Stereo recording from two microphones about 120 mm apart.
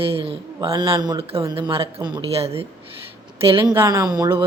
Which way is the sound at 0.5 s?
35° right (ahead or behind).